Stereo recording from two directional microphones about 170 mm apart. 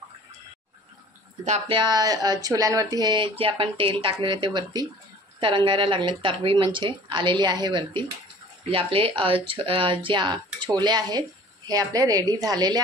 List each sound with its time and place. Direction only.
1.4 s speech: 40° right (ahead or behind)
1.8 s speech: 25° right (ahead or behind)